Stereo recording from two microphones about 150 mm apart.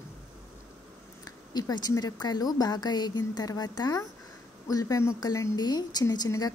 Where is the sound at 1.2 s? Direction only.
25° left (ahead or behind).